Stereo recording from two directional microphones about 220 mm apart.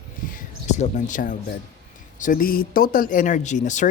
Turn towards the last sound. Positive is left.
turn(degrees=35)  # may be behind; listen again after turning